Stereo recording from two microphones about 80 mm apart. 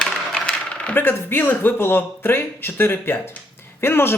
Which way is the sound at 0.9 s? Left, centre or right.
Left.